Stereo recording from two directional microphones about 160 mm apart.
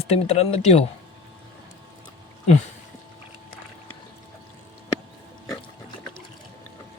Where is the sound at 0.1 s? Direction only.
40° left (ahead or behind).